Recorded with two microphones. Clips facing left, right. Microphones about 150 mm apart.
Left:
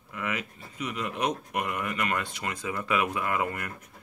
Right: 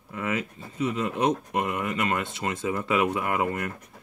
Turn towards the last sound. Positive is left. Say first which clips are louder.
# right 3 dB
turn(degrees=-25)  # may be behind; listen again after turning